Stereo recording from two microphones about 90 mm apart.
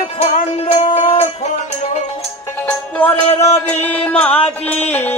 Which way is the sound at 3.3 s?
30° left (ahead or behind).